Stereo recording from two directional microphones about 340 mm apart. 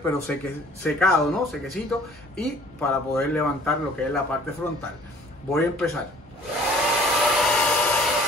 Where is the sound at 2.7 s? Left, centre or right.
Centre.